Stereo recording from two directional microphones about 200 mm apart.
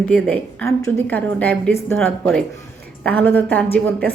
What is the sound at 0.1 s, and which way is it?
A woman's voice, 5° left (ahead or behind).